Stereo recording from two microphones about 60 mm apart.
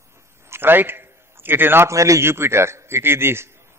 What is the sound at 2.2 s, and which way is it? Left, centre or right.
A man's voice, right.